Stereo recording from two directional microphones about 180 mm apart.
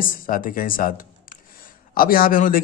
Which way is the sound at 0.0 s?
50° left (ahead or behind).